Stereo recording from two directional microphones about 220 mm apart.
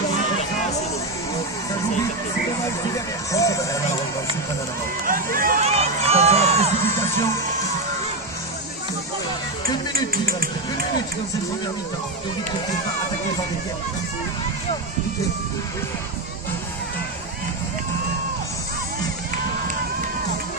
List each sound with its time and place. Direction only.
3.3 s music: 15° left (ahead or behind)
5.0 s run: 40° right (ahead or behind)
5.6 s crowd: 30° right (ahead or behind)
10.1 s a sound: 40° right (ahead or behind)